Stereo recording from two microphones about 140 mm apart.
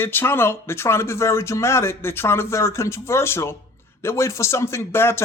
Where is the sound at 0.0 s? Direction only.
15° left (ahead or behind).